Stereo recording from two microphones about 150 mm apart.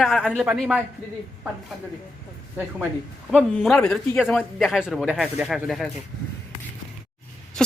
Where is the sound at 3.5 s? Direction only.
5° left (ahead or behind).